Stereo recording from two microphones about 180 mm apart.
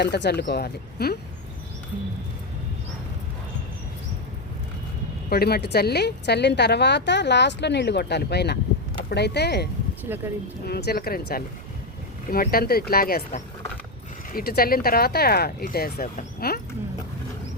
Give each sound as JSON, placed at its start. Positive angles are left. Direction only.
{"t": 0.0, "sound": "speech", "side_deg": 65}
{"t": 5.3, "sound": "a woman's voice", "side_deg": 60}
{"t": 10.1, "sound": "speech", "side_deg": -15}
{"t": 10.7, "sound": "speech", "side_deg": 65}
{"t": 14.3, "sound": "speech", "side_deg": 55}